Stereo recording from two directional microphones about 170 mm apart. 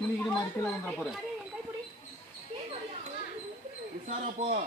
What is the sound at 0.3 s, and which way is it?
Speech, 5° left (ahead or behind).